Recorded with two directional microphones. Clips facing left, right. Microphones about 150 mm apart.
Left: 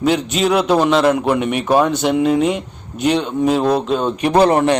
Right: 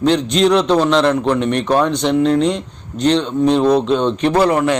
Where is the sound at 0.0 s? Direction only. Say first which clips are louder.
Right 3 dB; 5° left (ahead or behind).